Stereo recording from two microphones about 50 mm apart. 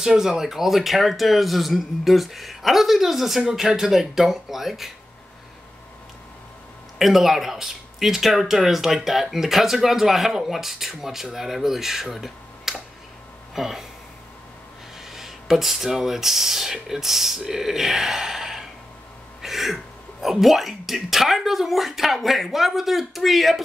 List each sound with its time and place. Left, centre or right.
0.0 s speech: centre
7.0 s speech: centre
15.0 s speech: centre